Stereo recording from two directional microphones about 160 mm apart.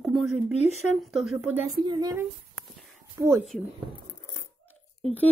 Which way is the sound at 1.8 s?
25° right (ahead or behind).